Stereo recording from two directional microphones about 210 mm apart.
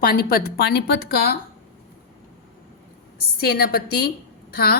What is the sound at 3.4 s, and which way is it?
A woman's voice, 45° left (ahead or behind).